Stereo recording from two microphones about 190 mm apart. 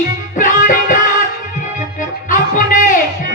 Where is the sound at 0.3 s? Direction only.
45° left (ahead or behind).